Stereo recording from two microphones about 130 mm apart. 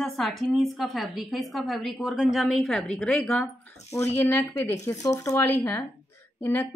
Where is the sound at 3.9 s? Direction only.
20° left (ahead or behind).